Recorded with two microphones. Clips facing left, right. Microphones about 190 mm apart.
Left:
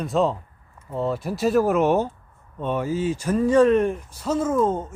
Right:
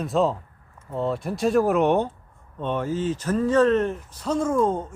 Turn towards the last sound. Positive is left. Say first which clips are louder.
# left 1 dB
turn(degrees=5)  # may be behind; listen again after turning